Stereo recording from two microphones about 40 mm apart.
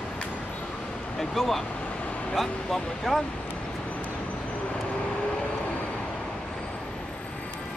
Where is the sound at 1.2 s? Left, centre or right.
Centre.